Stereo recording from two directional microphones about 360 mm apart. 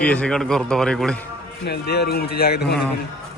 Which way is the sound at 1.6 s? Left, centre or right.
Left.